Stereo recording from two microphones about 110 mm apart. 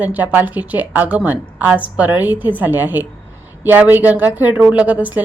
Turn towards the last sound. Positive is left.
turn(degrees=-15)  # may be behind; listen again after turning